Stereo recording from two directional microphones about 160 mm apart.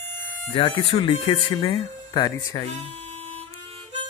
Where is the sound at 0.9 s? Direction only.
35° left (ahead or behind).